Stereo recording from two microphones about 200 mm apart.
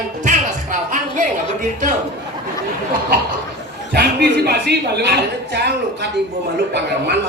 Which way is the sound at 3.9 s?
55° right (ahead or behind).